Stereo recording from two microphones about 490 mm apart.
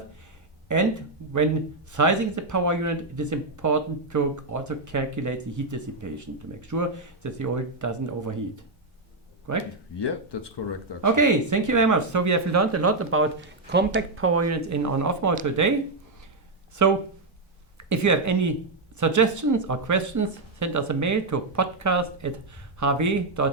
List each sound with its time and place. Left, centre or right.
0.7 s speech: right
1.9 s speech: right
10.0 s speech: left
11.0 s speech: right
16.8 s speech: right